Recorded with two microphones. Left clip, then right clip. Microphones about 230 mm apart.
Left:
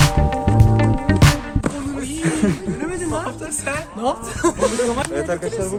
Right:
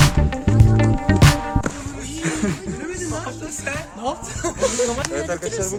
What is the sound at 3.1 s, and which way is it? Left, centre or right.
Music, left.